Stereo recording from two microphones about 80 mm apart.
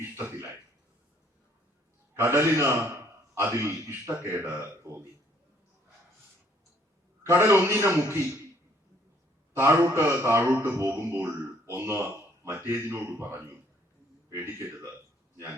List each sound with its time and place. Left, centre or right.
0.0 s speech: right
2.1 s a man's voice: right
7.3 s a man's voice: right
9.6 s a man's voice: right